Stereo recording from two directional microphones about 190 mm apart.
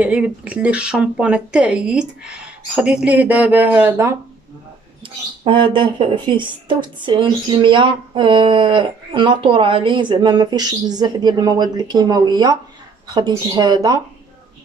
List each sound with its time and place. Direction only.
0.0 s speech: 5° right (ahead or behind)
5.4 s a woman's voice: 30° right (ahead or behind)